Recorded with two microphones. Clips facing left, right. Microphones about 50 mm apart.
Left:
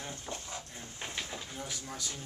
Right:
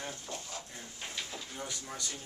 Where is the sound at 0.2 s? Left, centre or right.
Centre.